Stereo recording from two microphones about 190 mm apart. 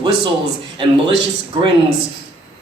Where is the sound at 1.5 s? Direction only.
25° right (ahead or behind).